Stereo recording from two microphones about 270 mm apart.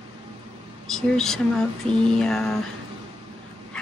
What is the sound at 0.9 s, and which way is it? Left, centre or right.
Speech, centre.